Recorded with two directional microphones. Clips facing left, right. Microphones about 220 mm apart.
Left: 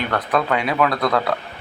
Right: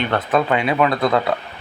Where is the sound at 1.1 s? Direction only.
20° right (ahead or behind).